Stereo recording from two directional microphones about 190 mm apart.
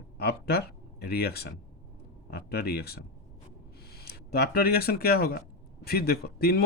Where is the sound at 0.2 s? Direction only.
55° left (ahead or behind).